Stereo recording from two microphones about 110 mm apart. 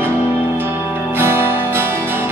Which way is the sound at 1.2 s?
20° right (ahead or behind).